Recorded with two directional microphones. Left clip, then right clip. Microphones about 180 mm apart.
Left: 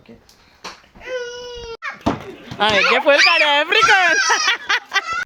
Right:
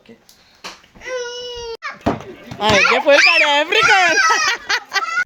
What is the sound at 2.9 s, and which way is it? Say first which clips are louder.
Speech: right 1 dB; centre (ahead or behind).